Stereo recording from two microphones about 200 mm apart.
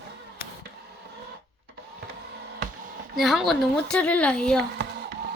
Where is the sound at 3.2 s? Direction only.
Centre (ahead or behind).